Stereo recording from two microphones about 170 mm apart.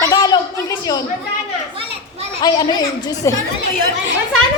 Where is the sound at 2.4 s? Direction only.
25° left (ahead or behind).